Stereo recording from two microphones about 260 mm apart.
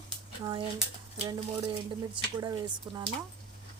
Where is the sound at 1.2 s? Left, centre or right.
Right.